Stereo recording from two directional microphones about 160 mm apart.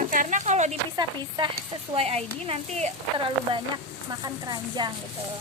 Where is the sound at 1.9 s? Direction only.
40° right (ahead or behind).